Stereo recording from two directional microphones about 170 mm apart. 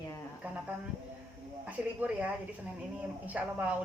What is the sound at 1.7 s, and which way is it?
A woman's voice, 10° right (ahead or behind).